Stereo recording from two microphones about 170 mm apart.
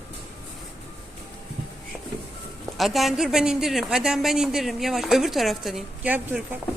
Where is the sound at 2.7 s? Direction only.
Centre (ahead or behind).